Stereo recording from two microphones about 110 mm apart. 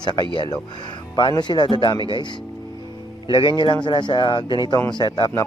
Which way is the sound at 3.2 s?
45° left (ahead or behind).